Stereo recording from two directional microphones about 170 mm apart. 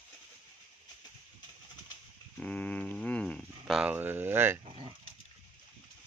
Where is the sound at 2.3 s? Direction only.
5° left (ahead or behind); by 4.6 s 15° right (ahead or behind).